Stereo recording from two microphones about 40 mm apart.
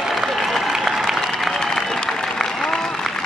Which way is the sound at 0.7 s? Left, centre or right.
Centre.